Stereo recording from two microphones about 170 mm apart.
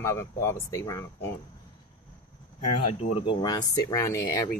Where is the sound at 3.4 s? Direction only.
20° left (ahead or behind).